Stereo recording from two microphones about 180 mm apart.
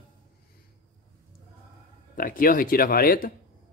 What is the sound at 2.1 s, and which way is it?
Speech, 50° left (ahead or behind).